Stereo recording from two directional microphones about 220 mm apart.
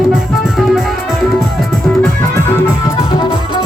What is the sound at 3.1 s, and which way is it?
Music, 20° left (ahead or behind).